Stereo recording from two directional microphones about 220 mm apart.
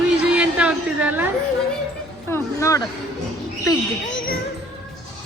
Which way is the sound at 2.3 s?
10° left (ahead or behind).